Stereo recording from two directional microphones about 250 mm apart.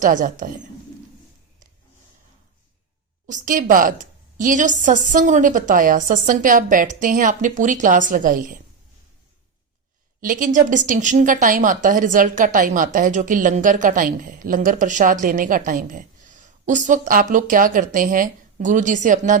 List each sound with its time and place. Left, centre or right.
0.0 s a woman's voice: right
3.2 s a woman's voice: right
10.2 s a woman's voice: right